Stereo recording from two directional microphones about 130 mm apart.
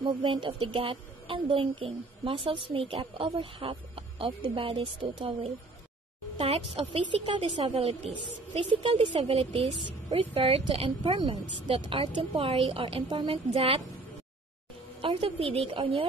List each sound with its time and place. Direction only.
0.0 s a woman's voice: 40° right (ahead or behind)
15.0 s a woman's voice: 45° right (ahead or behind)